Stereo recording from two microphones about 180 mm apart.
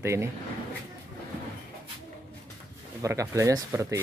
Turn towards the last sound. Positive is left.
turn(degrees=-15)  # may be behind; listen again after turning